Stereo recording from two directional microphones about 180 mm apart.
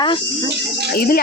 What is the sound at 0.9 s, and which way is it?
Music, 55° left (ahead or behind).